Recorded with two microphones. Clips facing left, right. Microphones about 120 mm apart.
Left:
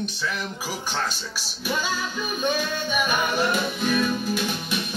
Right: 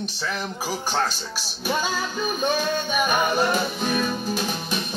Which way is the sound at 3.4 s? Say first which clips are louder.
Right 1 dB; 35° right (ahead or behind).